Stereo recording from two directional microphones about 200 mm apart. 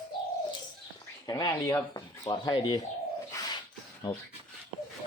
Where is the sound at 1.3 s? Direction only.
20° left (ahead or behind).